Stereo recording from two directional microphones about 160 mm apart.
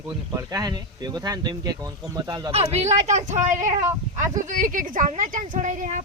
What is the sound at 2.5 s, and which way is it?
Speech, 40° right (ahead or behind).